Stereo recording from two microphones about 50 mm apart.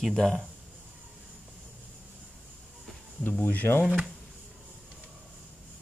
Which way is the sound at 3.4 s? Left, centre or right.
Left.